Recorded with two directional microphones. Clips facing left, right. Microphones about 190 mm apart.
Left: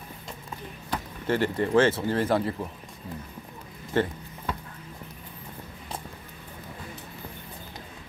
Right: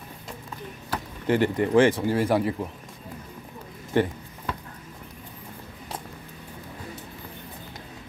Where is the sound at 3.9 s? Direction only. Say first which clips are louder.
Right 2 dB; 15° right (ahead or behind).